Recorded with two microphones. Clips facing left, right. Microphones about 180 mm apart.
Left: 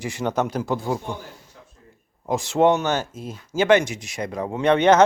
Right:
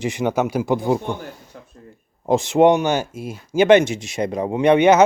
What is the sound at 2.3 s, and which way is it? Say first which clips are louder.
Speech: right 4 dB; 20° right (ahead or behind).